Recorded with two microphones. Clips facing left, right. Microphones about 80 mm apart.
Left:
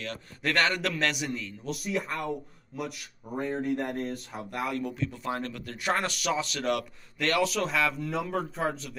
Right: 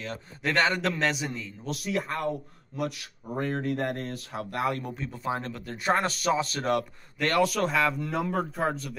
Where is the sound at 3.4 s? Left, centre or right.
Right.